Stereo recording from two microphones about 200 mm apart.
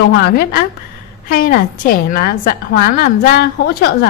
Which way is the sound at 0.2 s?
50° left (ahead or behind).